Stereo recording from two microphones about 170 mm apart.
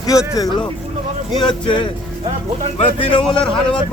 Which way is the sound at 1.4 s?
30° left (ahead or behind).